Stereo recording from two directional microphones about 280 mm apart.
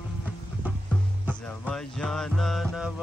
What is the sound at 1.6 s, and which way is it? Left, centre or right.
Music, centre.